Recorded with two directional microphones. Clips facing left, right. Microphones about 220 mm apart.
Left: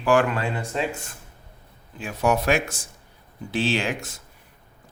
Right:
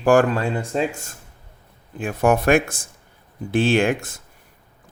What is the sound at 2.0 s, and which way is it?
Speech, 50° right (ahead or behind).